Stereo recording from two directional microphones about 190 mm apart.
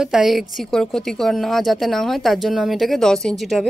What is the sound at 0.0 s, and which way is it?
A woman's voice, centre (ahead or behind).